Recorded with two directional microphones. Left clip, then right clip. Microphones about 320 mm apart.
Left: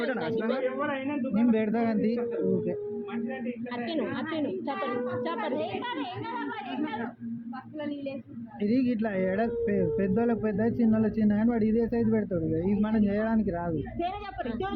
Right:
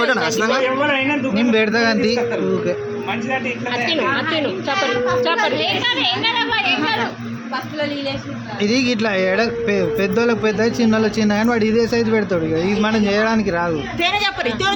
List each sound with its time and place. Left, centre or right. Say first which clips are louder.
0.0 s a man's voice: right 13 dB; centre
2.0 s a man's voice: right 11 dB; right
8.6 s a man's voice: right 10 dB; centre
14.0 s a man's voice: right 16 dB; right